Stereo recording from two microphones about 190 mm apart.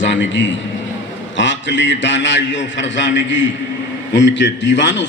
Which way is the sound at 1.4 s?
70° left (ahead or behind).